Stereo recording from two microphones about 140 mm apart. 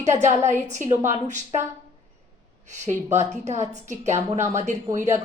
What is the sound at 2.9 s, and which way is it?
Speech, 20° right (ahead or behind).